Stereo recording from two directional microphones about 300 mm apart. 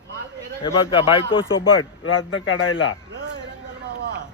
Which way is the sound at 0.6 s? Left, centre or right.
Centre.